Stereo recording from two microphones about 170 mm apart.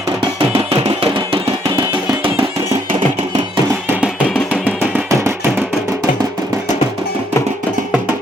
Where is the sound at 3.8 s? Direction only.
10° right (ahead or behind).